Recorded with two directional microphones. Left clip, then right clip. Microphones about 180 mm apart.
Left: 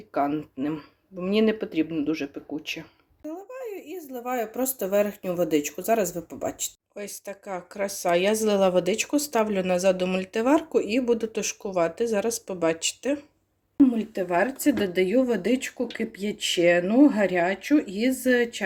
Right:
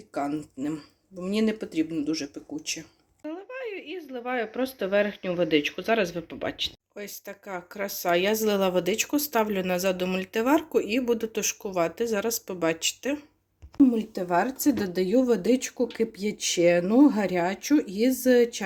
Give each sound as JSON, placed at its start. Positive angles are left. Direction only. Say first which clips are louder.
{"t": 0.1, "sound": "speech", "louder": "left 4 dB", "side_deg": 0}
{"t": 3.5, "sound": "speech", "louder": "right 2 dB", "side_deg": 15}
{"t": 6.1, "sound": "speech", "louder": "even", "side_deg": 0}
{"t": 13.8, "sound": "a woman's voice", "louder": "left 1 dB", "side_deg": -15}